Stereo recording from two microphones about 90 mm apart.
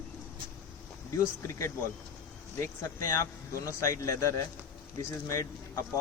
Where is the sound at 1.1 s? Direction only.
35° left (ahead or behind).